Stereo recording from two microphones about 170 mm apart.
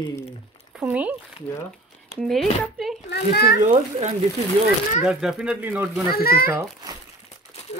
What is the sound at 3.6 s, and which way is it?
Speech, 45° right (ahead or behind).